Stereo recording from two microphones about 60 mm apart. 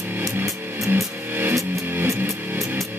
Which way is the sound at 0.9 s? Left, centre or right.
Right.